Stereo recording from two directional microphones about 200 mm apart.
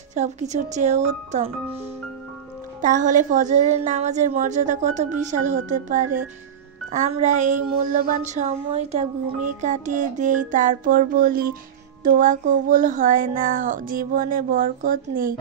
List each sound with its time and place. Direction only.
0.1 s music: 35° right (ahead or behind)
2.8 s music: 40° right (ahead or behind)
12.0 s speech: 45° right (ahead or behind)